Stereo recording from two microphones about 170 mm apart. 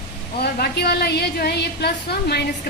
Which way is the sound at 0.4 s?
70° left (ahead or behind).